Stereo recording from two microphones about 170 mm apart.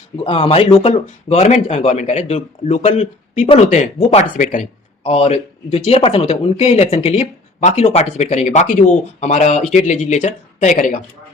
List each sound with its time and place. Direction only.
0.3 s speech: 35° left (ahead or behind); by 11.0 s 50° left (ahead or behind)